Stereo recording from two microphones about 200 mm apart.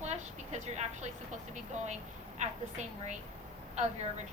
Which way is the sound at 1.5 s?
35° right (ahead or behind).